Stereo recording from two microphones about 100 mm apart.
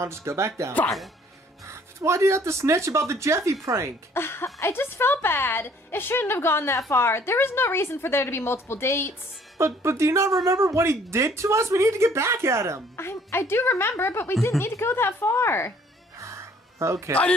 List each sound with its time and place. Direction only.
0.0 s speech: 25° right (ahead or behind)
4.1 s a woman's voice: 25° left (ahead or behind)
9.6 s speech: 30° right (ahead or behind)
12.9 s a woman's voice: 25° left (ahead or behind)
16.2 s music: 30° right (ahead or behind)